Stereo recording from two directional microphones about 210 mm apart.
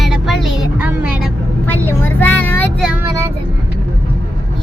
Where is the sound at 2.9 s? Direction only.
10° right (ahead or behind).